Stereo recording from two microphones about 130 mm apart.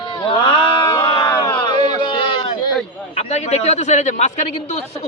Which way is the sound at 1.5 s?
35° left (ahead or behind).